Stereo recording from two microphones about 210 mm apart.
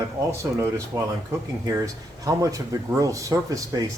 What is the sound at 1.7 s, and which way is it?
Speech, 15° right (ahead or behind).